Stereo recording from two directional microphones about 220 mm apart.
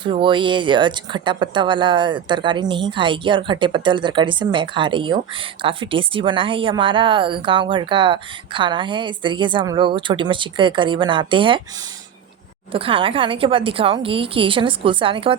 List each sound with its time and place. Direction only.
0.0 s speech: 20° right (ahead or behind)
12.7 s speech: 25° right (ahead or behind)